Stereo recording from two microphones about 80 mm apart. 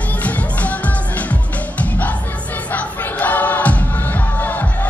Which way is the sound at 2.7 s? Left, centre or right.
Centre.